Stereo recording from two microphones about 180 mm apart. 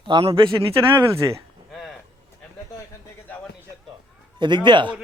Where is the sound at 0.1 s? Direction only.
30° right (ahead or behind).